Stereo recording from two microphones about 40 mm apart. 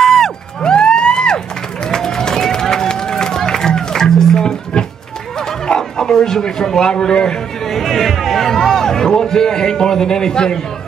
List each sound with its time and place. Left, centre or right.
0.0 s music: centre
0.6 s a sound: left
1.9 s run: centre
5.8 s a man's voice: centre